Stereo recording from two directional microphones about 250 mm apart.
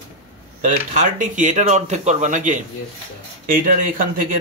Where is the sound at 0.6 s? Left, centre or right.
Right.